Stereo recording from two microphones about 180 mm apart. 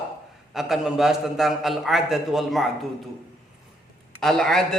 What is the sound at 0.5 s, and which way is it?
A man's voice, centre (ahead or behind).